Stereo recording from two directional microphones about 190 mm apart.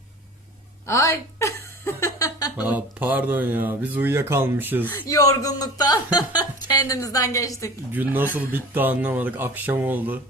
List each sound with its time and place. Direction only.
0.9 s a sound: 15° left (ahead or behind)
2.6 s speech: 10° right (ahead or behind)
4.9 s speech: 15° left (ahead or behind)
7.9 s speech: 10° right (ahead or behind)